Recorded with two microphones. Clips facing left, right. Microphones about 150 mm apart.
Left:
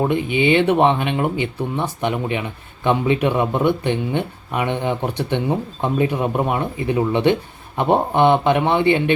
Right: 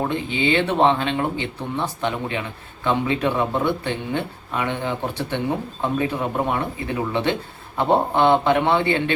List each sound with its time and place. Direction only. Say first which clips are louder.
0.0 s speech: left 5 dB; 15° left (ahead or behind)